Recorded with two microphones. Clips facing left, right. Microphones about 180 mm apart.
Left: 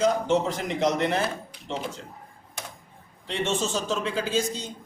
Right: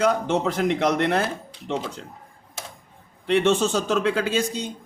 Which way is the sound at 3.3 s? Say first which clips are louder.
Right 7 dB; 60° right (ahead or behind).